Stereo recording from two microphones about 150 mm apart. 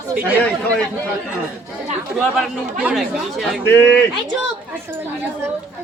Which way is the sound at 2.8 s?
Centre (ahead or behind).